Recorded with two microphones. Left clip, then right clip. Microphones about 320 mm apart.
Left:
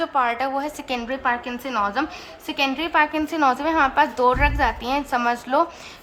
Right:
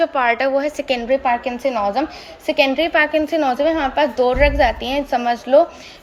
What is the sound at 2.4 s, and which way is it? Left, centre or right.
A woman's voice, centre.